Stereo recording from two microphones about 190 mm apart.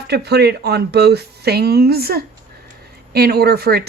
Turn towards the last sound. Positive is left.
turn(degrees=-55)  # may be behind; listen again after turning